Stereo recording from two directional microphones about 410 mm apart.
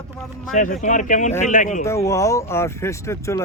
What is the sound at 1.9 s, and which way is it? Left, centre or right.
Speech, centre.